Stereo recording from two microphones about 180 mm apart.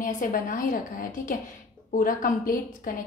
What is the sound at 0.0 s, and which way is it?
A woman's voice, 50° left (ahead or behind).